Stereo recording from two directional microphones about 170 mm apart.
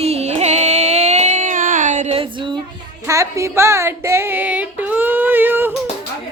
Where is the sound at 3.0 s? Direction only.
20° right (ahead or behind).